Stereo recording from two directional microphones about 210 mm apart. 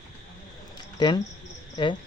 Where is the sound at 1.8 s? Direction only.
20° left (ahead or behind).